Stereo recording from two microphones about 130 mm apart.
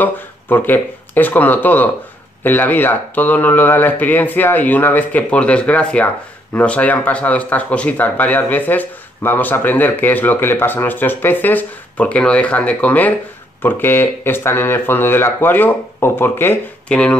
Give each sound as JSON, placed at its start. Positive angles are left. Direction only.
{"t": 0.0, "sound": "speech", "side_deg": 15}